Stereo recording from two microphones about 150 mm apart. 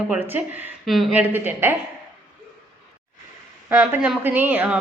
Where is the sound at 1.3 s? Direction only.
15° right (ahead or behind).